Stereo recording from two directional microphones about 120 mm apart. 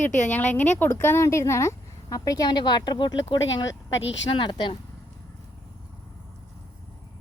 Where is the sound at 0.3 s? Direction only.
15° left (ahead or behind); by 4.8 s 40° left (ahead or behind).